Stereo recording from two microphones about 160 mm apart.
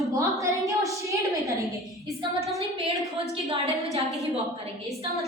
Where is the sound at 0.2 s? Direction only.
20° right (ahead or behind).